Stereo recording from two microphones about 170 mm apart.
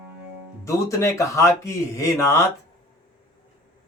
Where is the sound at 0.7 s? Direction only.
20° left (ahead or behind).